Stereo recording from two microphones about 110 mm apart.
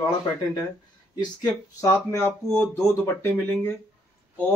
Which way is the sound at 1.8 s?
25° left (ahead or behind).